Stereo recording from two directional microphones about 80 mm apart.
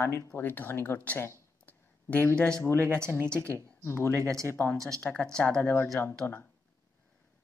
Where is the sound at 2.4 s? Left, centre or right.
Centre.